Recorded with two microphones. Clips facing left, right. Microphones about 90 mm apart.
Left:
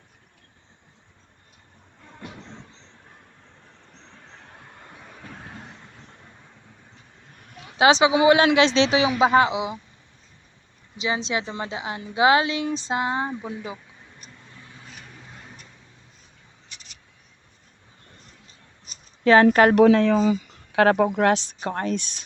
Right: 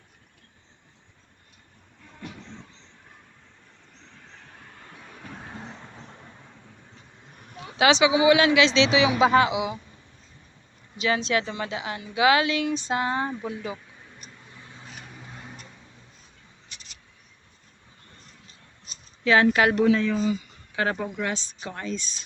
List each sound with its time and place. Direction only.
4.3 s vehicle: 15° left (ahead or behind); by 5.6 s 5° right (ahead or behind)
7.8 s a man's voice: 35° left (ahead or behind)
9.2 s speech: 30° left (ahead or behind)
10.9 s speech: 20° left (ahead or behind)
14.5 s vehicle: 20° right (ahead or behind)
15.1 s vehicle: 10° right (ahead or behind)
19.2 s a man's voice: 45° left (ahead or behind)
19.7 s speech: 65° left (ahead or behind)
21.7 s speech: 55° left (ahead or behind)